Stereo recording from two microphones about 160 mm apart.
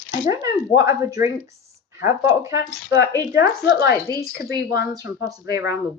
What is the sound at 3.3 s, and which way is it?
Speech, 90° left.